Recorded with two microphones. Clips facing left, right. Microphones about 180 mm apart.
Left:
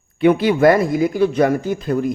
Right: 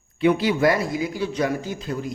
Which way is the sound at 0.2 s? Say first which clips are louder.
Left 5 dB; 55° left (ahead or behind).